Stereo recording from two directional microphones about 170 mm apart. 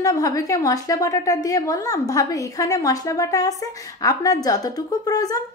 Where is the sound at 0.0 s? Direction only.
20° left (ahead or behind).